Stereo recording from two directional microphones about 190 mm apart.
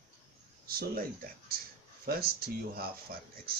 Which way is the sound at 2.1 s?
55° right (ahead or behind).